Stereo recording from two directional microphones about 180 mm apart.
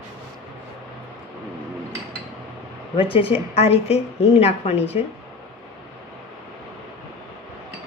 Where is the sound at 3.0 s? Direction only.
30° left (ahead or behind).